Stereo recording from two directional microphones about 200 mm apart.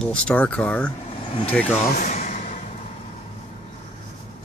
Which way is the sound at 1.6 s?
40° left (ahead or behind).